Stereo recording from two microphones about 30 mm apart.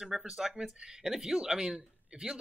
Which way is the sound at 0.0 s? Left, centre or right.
Right.